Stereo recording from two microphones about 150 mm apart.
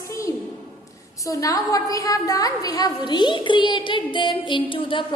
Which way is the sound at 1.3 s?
20° left (ahead or behind).